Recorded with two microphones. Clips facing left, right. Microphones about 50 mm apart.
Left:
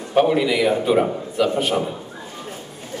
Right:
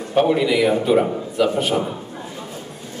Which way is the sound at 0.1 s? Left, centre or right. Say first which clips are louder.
Even; centre.